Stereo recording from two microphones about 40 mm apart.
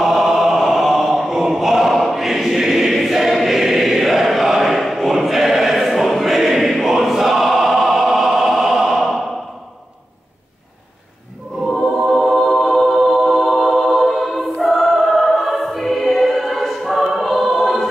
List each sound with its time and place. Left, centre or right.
0.0 s choir: centre
11.7 s choir: centre
12.1 s music: centre